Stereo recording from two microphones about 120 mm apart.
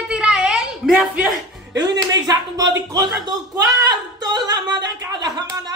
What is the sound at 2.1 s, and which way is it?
Speech, 30° right (ahead or behind).